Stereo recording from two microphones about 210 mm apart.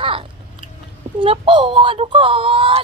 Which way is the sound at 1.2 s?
25° right (ahead or behind).